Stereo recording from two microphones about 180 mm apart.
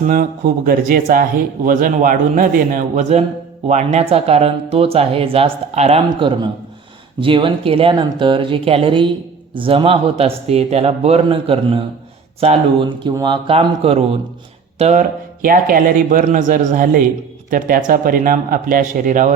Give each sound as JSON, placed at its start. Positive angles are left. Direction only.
{"t": 0.0, "sound": "speech", "side_deg": -50}